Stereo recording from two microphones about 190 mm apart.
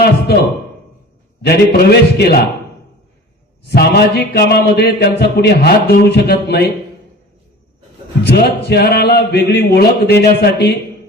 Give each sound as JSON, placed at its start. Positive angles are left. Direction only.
{"t": 1.4, "sound": "a man's voice", "side_deg": 60}
{"t": 3.7, "sound": "a man's voice", "side_deg": 60}
{"t": 8.2, "sound": "a man's voice", "side_deg": 60}